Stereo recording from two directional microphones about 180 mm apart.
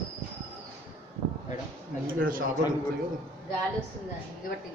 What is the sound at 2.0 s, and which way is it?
Speech, 50° right (ahead or behind).